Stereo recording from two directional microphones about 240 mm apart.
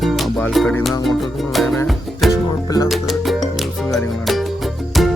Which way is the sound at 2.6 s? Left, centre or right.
Centre.